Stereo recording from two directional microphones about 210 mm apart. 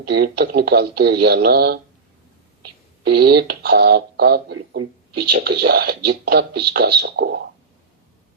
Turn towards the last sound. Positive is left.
turn(degrees=-50)  # may be behind; listen again after turning